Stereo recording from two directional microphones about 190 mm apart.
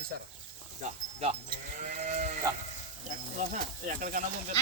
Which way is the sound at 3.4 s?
45° right (ahead or behind).